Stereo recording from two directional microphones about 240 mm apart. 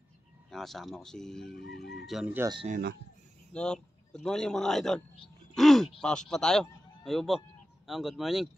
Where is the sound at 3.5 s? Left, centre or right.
Centre.